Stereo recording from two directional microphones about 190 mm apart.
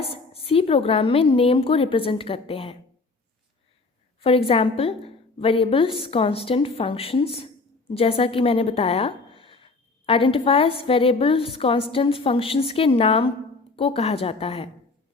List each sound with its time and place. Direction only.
0.4 s a woman's voice: 30° left (ahead or behind)
4.2 s a woman's voice: 30° left (ahead or behind)